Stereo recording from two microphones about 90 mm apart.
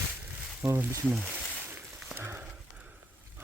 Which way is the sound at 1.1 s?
15° right (ahead or behind).